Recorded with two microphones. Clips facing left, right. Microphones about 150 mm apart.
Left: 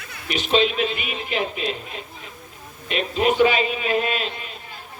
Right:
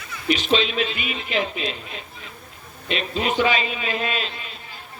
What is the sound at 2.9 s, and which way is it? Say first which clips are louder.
A man's voice: left 3 dB; 50° left (ahead or behind).